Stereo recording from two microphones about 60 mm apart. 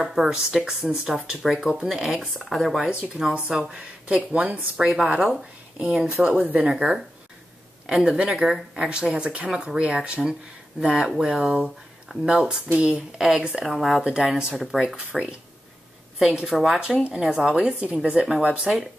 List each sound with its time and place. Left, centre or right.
0.0 s a woman's voice: centre
13.7 s speech: centre
16.8 s speech: centre